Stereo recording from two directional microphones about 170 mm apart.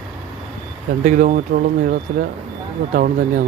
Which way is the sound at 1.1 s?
50° right (ahead or behind).